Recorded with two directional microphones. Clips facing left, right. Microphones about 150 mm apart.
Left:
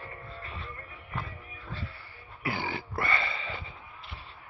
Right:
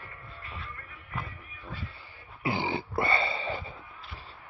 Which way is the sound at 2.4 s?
25° right (ahead or behind).